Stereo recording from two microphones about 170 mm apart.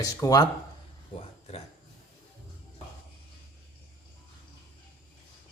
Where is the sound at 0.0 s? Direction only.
20° left (ahead or behind).